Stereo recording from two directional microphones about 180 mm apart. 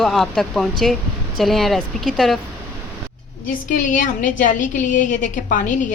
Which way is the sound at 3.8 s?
45° left (ahead or behind).